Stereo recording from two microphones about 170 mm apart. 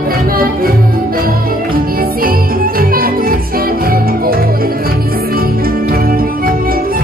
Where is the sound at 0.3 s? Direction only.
60° right (ahead or behind).